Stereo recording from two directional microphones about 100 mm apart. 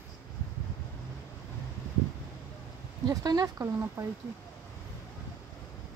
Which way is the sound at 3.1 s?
40° right (ahead or behind).